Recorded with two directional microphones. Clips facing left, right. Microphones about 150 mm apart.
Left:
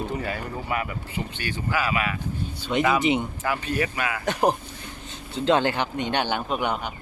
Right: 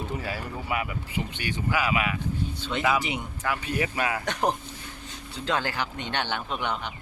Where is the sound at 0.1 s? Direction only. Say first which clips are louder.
Left 3 dB; 5° right (ahead or behind).